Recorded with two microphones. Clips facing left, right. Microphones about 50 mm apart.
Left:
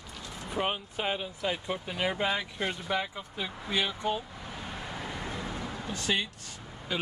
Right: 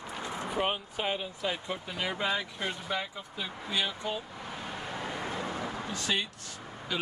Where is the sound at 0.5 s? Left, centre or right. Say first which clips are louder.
Left 1 dB; centre.